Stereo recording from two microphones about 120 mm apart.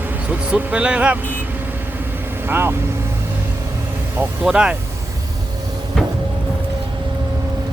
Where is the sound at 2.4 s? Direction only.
20° right (ahead or behind).